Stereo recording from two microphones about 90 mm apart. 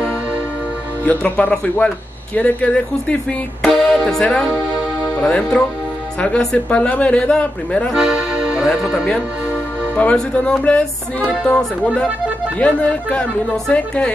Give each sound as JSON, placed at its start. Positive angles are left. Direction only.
{"t": 1.0, "sound": "speech", "side_deg": 15}
{"t": 3.6, "sound": "music", "side_deg": 0}
{"t": 5.2, "sound": "speech", "side_deg": 10}
{"t": 7.9, "sound": "music", "side_deg": -10}
{"t": 9.9, "sound": "speech", "side_deg": 10}